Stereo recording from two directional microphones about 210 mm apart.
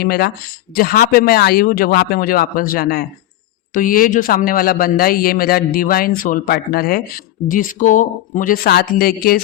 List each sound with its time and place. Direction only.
0.0 s a man's voice: 50° left (ahead or behind)